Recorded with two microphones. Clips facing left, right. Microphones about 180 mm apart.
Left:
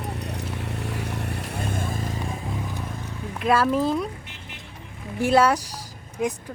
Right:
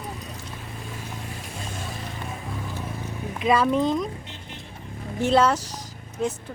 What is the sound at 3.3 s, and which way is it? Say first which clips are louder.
Speech: even; 5° left (ahead or behind).